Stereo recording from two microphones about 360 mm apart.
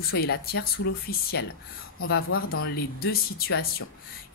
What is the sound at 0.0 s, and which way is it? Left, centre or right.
Speech, left.